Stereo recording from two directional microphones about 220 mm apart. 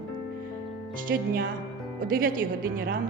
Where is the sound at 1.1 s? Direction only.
50° right (ahead or behind).